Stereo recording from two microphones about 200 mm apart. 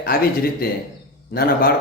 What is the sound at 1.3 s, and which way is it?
Speech, 50° left (ahead or behind).